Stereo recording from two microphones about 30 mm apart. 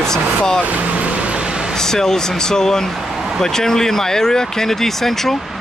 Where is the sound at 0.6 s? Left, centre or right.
Right.